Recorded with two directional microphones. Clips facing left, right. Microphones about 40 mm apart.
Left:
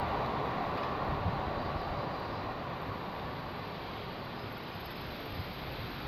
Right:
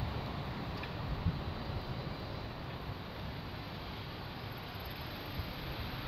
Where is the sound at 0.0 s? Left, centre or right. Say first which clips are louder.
Left 9 dB; left.